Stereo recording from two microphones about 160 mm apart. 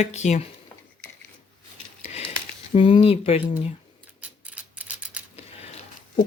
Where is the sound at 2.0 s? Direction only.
40° left (ahead or behind).